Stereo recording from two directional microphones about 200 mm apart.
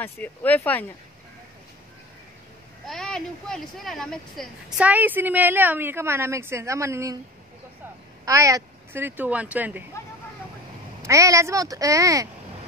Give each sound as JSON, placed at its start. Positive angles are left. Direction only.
{"t": 0.0, "sound": "speech", "side_deg": 10}
{"t": 2.9, "sound": "a woman's voice", "side_deg": 0}
{"t": 8.3, "sound": "a woman's voice", "side_deg": -15}
{"t": 11.0, "sound": "a woman's voice", "side_deg": -15}